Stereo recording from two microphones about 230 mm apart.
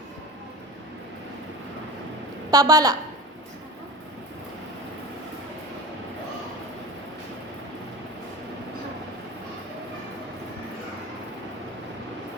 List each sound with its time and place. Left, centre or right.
2.5 s a woman's voice: centre